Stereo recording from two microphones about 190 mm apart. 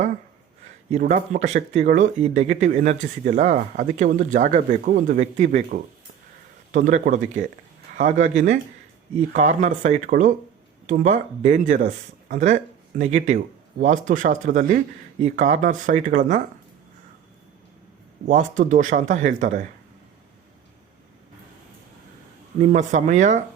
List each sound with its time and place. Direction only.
1.0 s speech: 40° right (ahead or behind)
18.3 s speech: 40° right (ahead or behind)
22.7 s speech: 40° right (ahead or behind)